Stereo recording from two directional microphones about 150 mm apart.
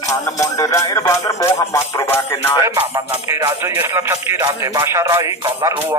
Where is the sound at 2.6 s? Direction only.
15° right (ahead or behind).